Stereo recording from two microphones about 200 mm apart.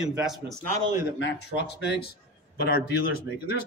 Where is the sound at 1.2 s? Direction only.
60° left (ahead or behind).